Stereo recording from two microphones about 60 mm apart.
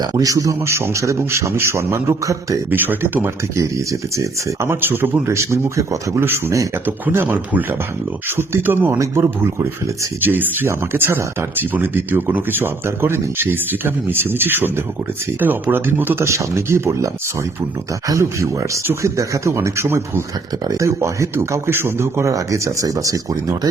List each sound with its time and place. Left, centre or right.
0.0 s a man's voice: right
0.6 s a man's voice: right
2.6 s speech: right
3.2 s speech: right
4.6 s speech: right
5.2 s a man's voice: right
6.1 s speech: right
8.4 s speech: right
8.9 s speech: right
10.2 s speech: right
16.2 s a man's voice: right
18.2 s a man's voice: right
20.7 s speech: right
21.7 s speech: right